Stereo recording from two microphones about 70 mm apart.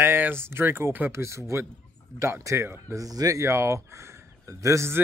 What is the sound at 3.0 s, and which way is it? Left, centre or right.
A man's voice, right.